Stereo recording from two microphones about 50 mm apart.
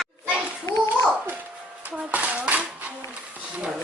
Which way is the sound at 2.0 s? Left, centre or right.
Right.